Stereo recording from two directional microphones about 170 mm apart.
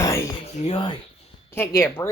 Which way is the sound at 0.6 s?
30° left (ahead or behind).